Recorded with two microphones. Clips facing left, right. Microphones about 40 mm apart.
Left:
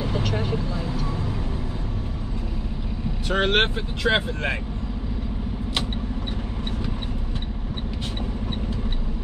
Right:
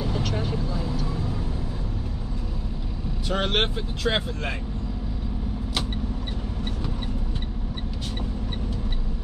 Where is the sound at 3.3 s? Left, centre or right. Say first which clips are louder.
Left 4 dB; centre.